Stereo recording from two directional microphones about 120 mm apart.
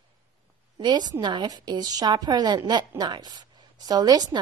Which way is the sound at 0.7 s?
35° right (ahead or behind).